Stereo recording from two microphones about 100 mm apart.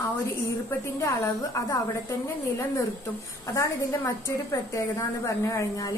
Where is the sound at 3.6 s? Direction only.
30° left (ahead or behind).